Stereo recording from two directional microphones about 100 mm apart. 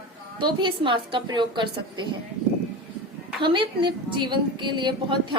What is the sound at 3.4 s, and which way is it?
A woman's voice, 55° right (ahead or behind).